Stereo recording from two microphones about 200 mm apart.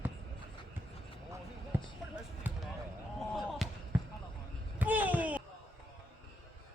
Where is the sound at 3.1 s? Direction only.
Centre (ahead or behind).